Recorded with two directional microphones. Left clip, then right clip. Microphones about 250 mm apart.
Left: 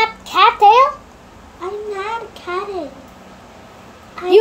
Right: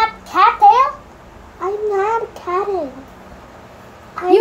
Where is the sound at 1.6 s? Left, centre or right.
Right.